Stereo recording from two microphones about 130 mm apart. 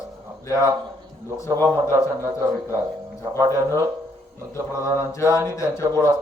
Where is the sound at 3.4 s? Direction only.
25° right (ahead or behind).